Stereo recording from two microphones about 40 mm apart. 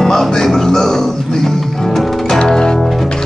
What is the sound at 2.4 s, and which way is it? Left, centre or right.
Music, centre.